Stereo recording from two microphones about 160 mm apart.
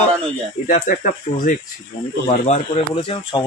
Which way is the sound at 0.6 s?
55° left (ahead or behind).